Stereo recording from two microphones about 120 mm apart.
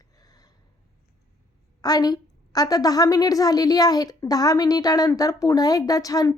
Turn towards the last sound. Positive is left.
turn(degrees=30)  # may be behind; listen again after turning